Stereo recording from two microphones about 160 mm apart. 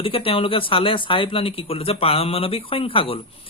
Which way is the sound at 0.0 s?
35° left (ahead or behind).